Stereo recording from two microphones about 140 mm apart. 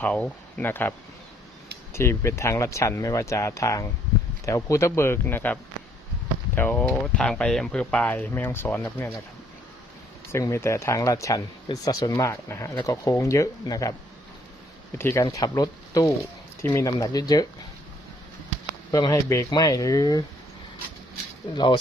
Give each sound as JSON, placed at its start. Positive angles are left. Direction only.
{"t": 0.0, "sound": "speech", "side_deg": 10}
{"t": 6.6, "sound": "speech", "side_deg": 15}
{"t": 10.3, "sound": "speech", "side_deg": 20}
{"t": 14.9, "sound": "speech", "side_deg": 20}
{"t": 18.9, "sound": "speech", "side_deg": 25}
{"t": 21.5, "sound": "speech", "side_deg": 35}